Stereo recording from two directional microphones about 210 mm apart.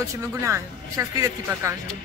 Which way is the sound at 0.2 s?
15° right (ahead or behind).